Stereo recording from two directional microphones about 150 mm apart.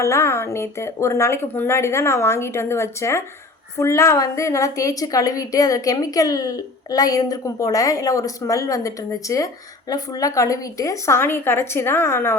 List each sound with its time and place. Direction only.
0.0 s a woman's voice: 20° left (ahead or behind)